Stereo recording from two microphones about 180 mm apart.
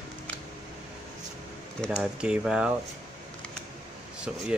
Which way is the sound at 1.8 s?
5° right (ahead or behind).